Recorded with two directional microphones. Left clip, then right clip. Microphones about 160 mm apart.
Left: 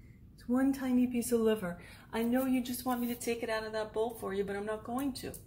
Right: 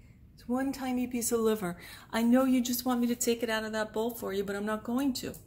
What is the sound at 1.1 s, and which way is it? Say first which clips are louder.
A woman's voice: right 5 dB; 60° right (ahead or behind).